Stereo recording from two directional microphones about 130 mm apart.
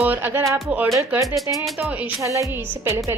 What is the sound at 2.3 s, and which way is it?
Speech, 20° right (ahead or behind).